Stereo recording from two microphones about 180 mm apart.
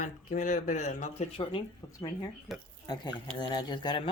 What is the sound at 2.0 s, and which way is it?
Speech, 20° left (ahead or behind).